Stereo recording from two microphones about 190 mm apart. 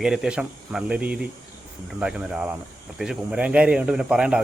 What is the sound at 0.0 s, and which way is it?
Speech, 5° right (ahead or behind).